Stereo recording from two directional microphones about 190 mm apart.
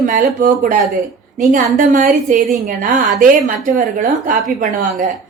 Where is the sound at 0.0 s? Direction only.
45° right (ahead or behind).